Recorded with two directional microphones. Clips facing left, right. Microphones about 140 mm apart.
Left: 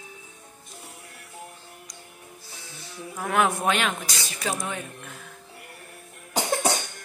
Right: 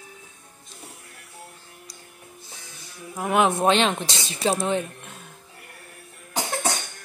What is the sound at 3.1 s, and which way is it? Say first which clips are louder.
Speech: right 3 dB; 20° right (ahead or behind).